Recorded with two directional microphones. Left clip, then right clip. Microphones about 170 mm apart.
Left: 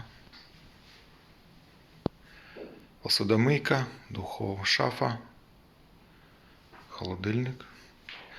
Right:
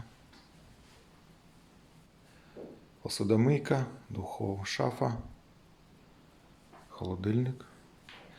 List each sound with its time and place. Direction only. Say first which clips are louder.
3.0 s speech: left 4 dB; 15° right (ahead or behind)
6.9 s speech: left 1 dB; 20° right (ahead or behind)